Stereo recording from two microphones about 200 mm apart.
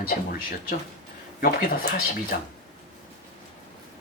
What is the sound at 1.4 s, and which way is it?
Speech, 45° left (ahead or behind).